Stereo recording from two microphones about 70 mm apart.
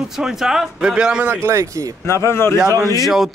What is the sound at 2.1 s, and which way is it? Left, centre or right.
Speech, left.